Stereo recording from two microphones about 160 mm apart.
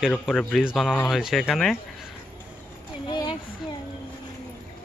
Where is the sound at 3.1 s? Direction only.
30° left (ahead or behind).